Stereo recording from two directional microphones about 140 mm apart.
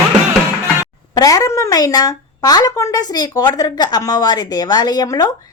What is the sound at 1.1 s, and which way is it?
A woman's voice, 25° left (ahead or behind).